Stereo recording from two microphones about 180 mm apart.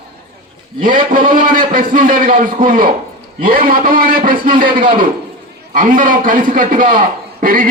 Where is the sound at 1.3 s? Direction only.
50° right (ahead or behind).